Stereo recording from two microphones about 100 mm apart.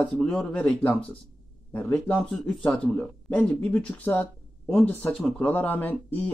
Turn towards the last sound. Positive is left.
turn(degrees=15)  # may be behind; listen again after turning